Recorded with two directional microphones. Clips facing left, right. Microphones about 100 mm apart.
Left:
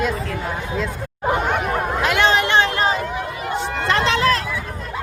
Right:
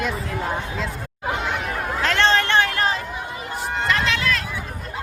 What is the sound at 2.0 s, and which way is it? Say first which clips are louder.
Chatter: left 1 dB; 15° left (ahead or behind).